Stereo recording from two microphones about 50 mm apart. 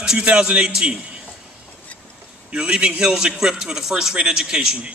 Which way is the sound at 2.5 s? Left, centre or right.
Right.